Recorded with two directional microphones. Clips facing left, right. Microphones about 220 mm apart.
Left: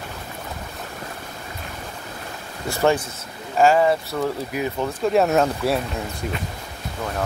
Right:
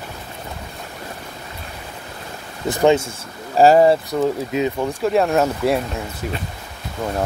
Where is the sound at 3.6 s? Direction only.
35° right (ahead or behind).